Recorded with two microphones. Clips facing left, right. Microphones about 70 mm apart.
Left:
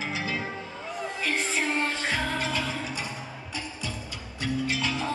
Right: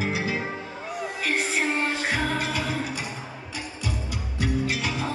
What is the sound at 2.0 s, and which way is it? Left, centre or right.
Music, centre.